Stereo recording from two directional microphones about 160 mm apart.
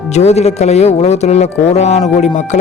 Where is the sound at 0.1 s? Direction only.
45° left (ahead or behind).